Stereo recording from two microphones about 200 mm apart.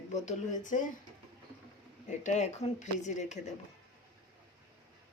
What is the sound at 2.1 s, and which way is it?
Speech, 35° left (ahead or behind).